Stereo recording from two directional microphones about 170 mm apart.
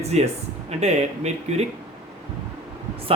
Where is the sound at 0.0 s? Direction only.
40° right (ahead or behind).